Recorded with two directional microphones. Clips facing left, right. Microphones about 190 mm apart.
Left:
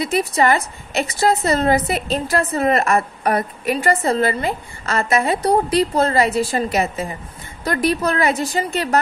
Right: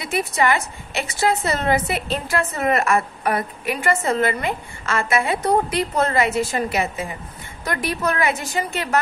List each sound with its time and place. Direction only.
0.0 s a woman's voice: 40° left (ahead or behind)